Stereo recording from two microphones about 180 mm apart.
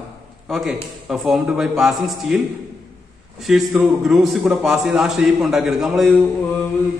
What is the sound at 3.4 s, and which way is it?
A man's voice, centre (ahead or behind).